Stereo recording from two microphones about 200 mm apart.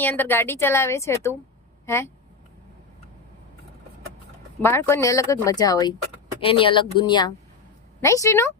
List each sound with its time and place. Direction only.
0.0 s a woman's voice: 10° left (ahead or behind)
4.6 s a woman's voice: 10° left (ahead or behind)